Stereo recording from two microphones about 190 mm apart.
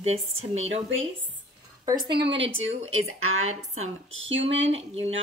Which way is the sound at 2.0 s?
60° right (ahead or behind).